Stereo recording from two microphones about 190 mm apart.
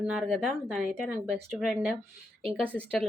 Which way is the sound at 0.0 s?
5° right (ahead or behind).